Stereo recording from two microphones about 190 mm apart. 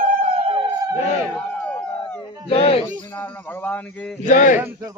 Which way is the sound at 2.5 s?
30° left (ahead or behind).